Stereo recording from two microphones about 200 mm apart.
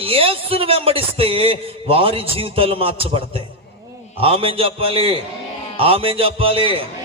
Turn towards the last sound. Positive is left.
turn(degrees=-25)  # may be behind; listen again after turning